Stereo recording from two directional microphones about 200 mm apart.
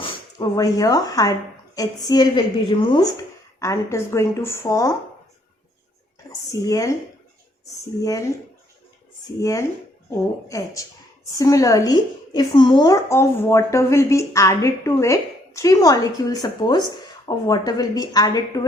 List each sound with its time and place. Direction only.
0.0 s a woman's voice: 25° left (ahead or behind)
6.5 s a woman's voice: 15° left (ahead or behind)
8.0 s a woman's voice: 15° left (ahead or behind)